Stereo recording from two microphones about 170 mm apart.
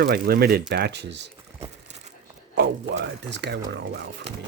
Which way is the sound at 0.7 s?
85° right.